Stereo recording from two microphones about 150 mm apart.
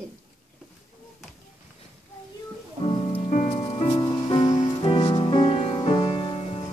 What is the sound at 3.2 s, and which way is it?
Music, 55° left (ahead or behind).